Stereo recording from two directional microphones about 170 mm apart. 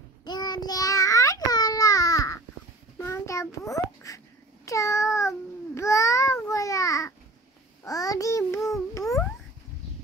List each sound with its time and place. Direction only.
0.2 s child singing: 25° left (ahead or behind)
3.0 s babbling: 20° left (ahead or behind)
4.6 s child singing: 20° left (ahead or behind)
5.8 s babbling: 20° left (ahead or behind)
7.8 s child singing: 20° left (ahead or behind)